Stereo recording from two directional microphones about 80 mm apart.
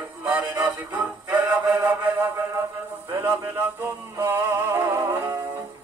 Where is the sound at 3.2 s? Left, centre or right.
Right.